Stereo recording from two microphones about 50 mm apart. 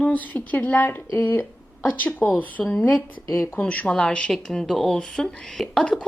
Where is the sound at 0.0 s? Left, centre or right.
Left.